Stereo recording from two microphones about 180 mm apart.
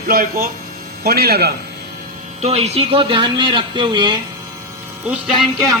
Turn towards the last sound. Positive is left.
turn(degrees=0)  # may be behind; listen again after turning